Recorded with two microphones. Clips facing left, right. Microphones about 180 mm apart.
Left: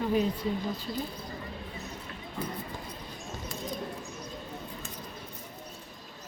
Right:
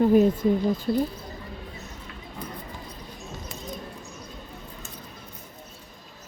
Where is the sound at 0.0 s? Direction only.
45° right (ahead or behind).